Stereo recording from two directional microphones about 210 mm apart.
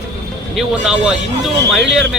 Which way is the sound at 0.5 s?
5° right (ahead or behind).